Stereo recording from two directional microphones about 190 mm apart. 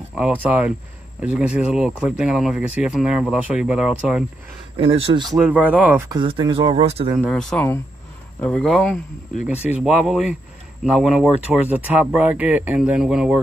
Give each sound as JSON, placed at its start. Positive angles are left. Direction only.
{"t": 0.1, "sound": "speech", "side_deg": -5}
{"t": 4.7, "sound": "speech", "side_deg": -30}
{"t": 5.2, "sound": "speech", "side_deg": 0}
{"t": 7.2, "sound": "speech", "side_deg": 0}